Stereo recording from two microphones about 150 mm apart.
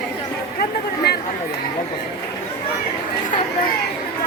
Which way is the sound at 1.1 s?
90° left.